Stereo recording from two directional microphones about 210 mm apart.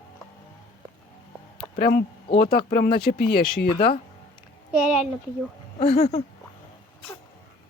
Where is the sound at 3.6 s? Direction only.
25° left (ahead or behind).